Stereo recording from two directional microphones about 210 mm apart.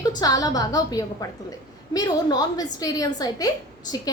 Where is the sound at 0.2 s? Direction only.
20° left (ahead or behind).